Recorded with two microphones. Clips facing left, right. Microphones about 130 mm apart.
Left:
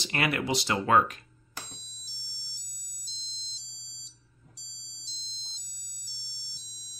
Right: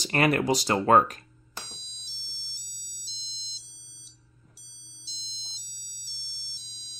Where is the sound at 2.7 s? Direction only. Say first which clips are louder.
Right 2 dB; 75° right (ahead or behind).